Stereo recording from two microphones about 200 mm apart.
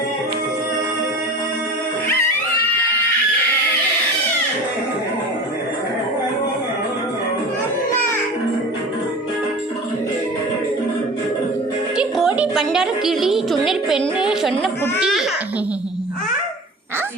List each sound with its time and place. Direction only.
11.9 s music: 5° right (ahead or behind)
13.7 s speech: centre (ahead or behind)